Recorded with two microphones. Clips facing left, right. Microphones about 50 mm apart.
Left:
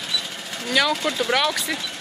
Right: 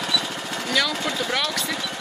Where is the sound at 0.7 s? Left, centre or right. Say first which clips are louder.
Left 3 dB; centre.